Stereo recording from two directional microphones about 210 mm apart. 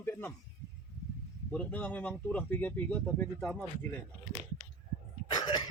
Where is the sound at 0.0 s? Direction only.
10° left (ahead or behind).